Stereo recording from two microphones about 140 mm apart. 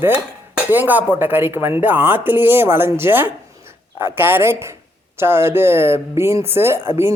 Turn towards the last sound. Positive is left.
turn(degrees=-15)  # may be behind; listen again after turning